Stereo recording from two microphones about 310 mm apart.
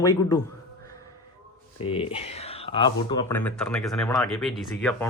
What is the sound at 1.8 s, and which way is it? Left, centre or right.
Speech, centre.